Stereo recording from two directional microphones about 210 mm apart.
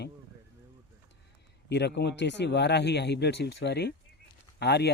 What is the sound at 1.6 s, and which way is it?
Speech, 55° left (ahead or behind).